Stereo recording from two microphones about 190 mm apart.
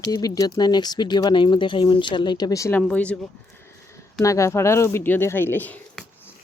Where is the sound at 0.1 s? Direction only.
20° left (ahead or behind).